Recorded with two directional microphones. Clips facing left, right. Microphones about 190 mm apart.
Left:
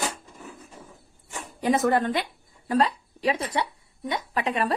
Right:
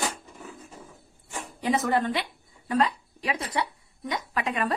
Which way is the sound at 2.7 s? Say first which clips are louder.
Left 2 dB; 35° left (ahead or behind).